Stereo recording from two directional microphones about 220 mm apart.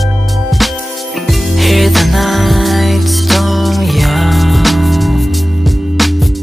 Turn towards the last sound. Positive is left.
turn(degrees=0)  # may be behind; listen again after turning